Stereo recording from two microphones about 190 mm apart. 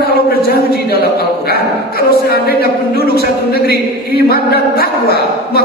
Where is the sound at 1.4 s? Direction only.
55° left (ahead or behind).